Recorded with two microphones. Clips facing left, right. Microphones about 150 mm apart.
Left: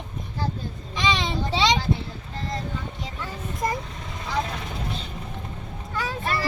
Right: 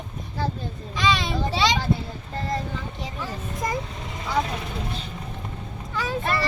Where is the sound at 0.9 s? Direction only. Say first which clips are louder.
Right 1 dB; 20° left (ahead or behind).